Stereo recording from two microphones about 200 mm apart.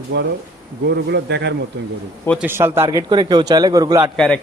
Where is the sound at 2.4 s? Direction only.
10° right (ahead or behind).